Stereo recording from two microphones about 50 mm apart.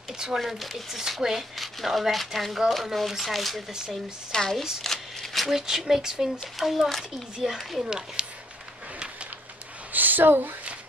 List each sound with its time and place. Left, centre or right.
0.4 s speech: centre
4.8 s shuffling cards: centre
5.6 s speech: centre
6.4 s speech: centre
7.8 s speech: centre
9.9 s a sound: right